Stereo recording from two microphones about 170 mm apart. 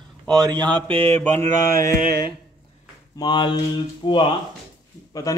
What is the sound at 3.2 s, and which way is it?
A man's voice, 25° left (ahead or behind).